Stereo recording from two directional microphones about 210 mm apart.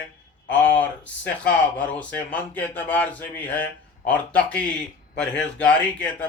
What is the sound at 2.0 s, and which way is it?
Speech, 5° left (ahead or behind).